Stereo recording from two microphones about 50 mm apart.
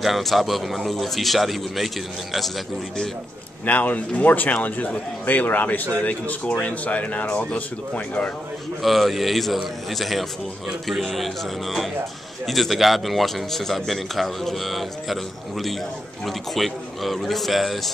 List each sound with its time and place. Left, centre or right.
0.0 s a man's voice: centre
3.6 s speech: left
8.8 s a man's voice: centre